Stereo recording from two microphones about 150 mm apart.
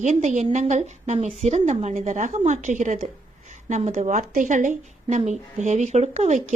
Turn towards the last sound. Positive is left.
turn(degrees=-55)  # may be behind; listen again after turning